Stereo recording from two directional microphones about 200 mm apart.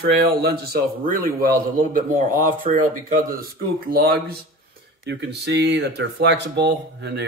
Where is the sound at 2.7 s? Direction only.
30° right (ahead or behind).